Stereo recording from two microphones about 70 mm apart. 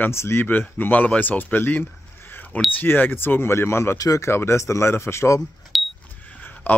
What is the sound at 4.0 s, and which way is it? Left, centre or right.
Speech, left.